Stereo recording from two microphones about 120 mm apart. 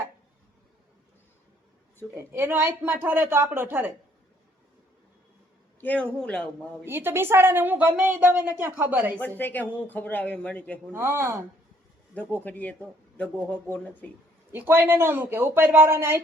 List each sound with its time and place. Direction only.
2.1 s speech: 20° right (ahead or behind)
5.8 s speech: 10° left (ahead or behind)
6.8 s a woman's voice: 20° right (ahead or behind)
9.4 s speech: 15° left (ahead or behind)
10.9 s speech: 20° right (ahead or behind)
12.1 s speech: 15° left (ahead or behind)
14.5 s a woman's voice: 15° right (ahead or behind)